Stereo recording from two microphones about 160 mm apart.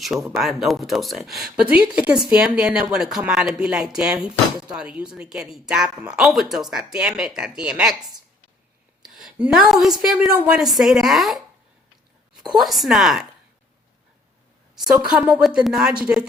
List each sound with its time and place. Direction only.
0.0 s speech: centre (ahead or behind)
12.5 s speech: centre (ahead or behind)
15.1 s speech: 5° right (ahead or behind)